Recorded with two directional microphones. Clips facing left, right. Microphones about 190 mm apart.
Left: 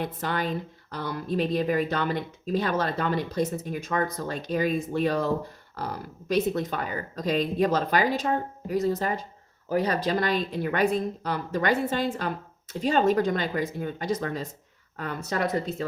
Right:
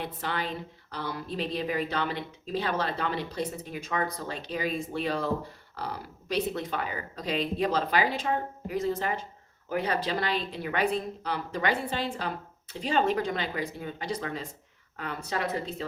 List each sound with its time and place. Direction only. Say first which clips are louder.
0.0 s a woman's voice: left 4 dB; 45° left (ahead or behind)